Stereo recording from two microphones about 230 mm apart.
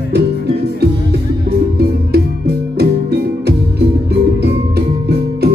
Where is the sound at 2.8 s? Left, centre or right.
Right.